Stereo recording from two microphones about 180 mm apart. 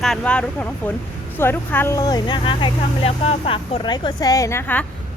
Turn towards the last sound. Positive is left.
turn(degrees=10)  # may be behind; listen again after turning